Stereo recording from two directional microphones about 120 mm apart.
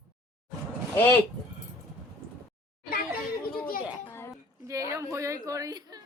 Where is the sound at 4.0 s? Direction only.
20° left (ahead or behind).